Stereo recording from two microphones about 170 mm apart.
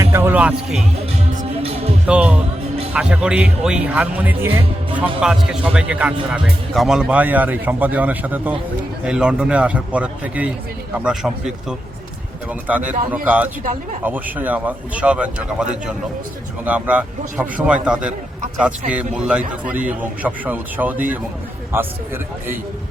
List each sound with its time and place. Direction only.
0.0 s speech: 15° right (ahead or behind)
1.4 s music: 35° right (ahead or behind)
2.0 s a man's voice: 5° right (ahead or behind)
12.6 s a man's voice: 10° right (ahead or behind)